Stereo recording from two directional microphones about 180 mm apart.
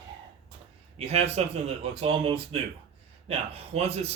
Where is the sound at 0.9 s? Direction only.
35° right (ahead or behind).